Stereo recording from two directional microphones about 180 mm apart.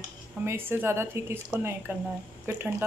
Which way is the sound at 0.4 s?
10° right (ahead or behind).